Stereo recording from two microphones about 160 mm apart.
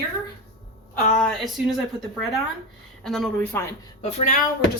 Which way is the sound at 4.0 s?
40° left (ahead or behind).